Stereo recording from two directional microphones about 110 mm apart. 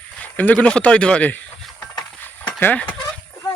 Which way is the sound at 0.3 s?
15° left (ahead or behind).